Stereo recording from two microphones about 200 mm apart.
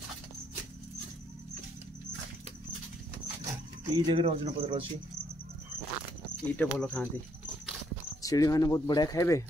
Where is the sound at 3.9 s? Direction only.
25° right (ahead or behind).